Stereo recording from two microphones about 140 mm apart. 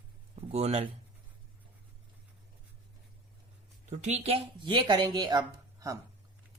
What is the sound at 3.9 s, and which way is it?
Speech, 50° right (ahead or behind).